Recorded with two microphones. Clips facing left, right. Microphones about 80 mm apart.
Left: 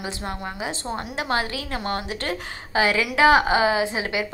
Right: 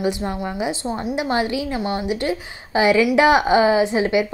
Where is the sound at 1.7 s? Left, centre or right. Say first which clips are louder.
Right 4 dB; left.